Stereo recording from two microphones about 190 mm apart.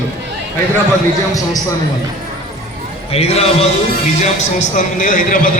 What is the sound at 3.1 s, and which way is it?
A man's voice, 35° left (ahead or behind).